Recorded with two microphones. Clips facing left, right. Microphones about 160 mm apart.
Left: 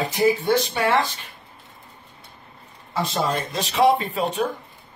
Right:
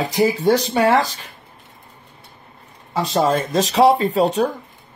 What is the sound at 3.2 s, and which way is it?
Speech, 45° right (ahead or behind).